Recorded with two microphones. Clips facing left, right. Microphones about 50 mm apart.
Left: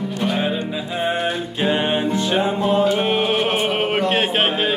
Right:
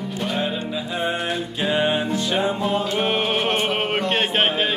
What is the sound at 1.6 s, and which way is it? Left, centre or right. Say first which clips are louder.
Music: left 2 dB; left.